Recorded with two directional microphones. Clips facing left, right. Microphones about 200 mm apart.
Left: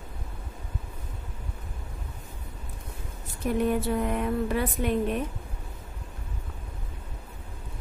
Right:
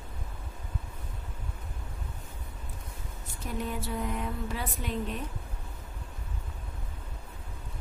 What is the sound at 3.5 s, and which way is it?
Speech, 60° left (ahead or behind).